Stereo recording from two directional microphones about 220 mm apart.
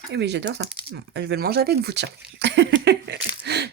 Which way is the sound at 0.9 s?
50° right (ahead or behind).